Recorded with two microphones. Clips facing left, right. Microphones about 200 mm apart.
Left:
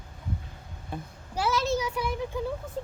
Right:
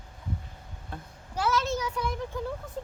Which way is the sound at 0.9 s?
10° left (ahead or behind).